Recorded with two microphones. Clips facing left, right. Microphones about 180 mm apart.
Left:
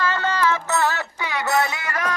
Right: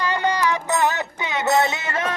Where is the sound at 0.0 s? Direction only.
15° right (ahead or behind).